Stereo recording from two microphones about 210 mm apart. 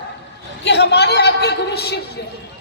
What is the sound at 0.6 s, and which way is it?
A woman's voice, 55° left (ahead or behind).